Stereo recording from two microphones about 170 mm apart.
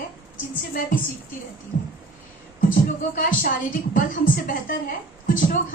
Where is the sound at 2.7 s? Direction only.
55° left (ahead or behind).